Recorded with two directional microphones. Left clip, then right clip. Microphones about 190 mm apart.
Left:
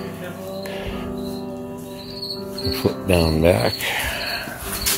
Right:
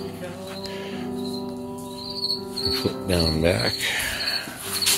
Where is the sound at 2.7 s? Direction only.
10° left (ahead or behind).